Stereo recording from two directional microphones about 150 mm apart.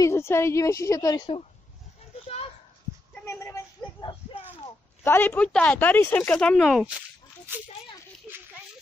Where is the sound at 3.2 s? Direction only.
20° left (ahead or behind).